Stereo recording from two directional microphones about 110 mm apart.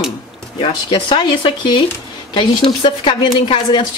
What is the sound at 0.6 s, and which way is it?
A woman's voice, 50° left (ahead or behind).